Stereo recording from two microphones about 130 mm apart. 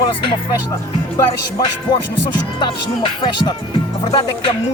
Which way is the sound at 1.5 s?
35° left (ahead or behind).